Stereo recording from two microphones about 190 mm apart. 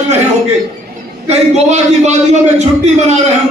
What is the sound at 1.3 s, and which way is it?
A man's voice, 35° right (ahead or behind).